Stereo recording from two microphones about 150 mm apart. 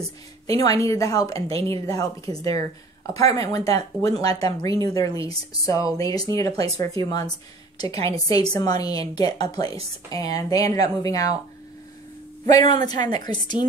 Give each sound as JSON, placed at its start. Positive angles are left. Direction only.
{"t": 0.5, "sound": "speech", "side_deg": 25}
{"t": 12.5, "sound": "speech", "side_deg": 25}